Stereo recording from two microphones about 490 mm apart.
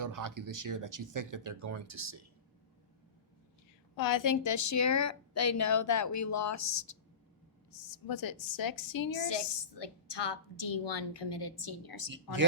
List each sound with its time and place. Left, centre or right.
0.0 s speech: right
3.9 s a woman's voice: left